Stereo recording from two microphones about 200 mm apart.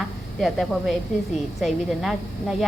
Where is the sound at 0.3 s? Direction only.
Centre (ahead or behind).